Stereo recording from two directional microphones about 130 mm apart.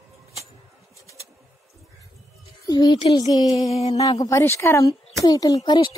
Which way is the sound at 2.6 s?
30° left (ahead or behind).